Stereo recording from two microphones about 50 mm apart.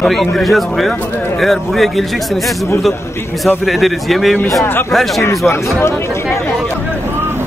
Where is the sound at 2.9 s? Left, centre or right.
Left.